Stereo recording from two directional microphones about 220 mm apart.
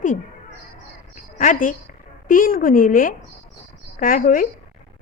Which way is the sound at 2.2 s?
40° left (ahead or behind).